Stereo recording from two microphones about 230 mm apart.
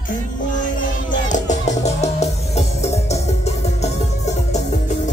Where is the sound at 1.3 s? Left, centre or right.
Left.